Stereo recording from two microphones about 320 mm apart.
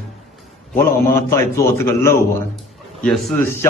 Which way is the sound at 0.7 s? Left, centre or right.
Centre.